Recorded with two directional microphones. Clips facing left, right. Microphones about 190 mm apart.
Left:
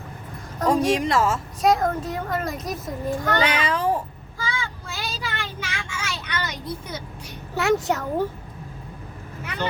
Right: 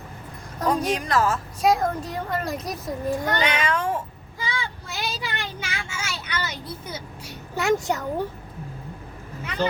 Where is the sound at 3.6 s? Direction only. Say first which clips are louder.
Left 2 dB; 35° left (ahead or behind).